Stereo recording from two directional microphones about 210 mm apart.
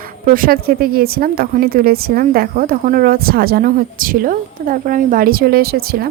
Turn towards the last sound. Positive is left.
turn(degrees=-45)  # may be behind; listen again after turning